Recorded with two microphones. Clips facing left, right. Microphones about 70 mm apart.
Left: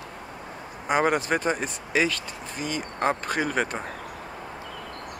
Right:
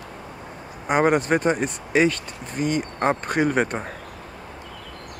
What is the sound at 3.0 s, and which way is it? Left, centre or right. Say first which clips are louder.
Speech: right 3 dB; centre.